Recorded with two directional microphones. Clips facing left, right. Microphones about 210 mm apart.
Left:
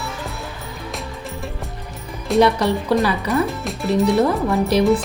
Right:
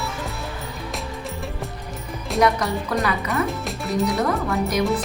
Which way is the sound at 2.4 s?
30° left (ahead or behind).